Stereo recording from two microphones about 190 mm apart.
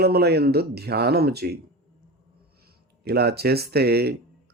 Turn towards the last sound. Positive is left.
turn(degrees=-55)  # may be behind; listen again after turning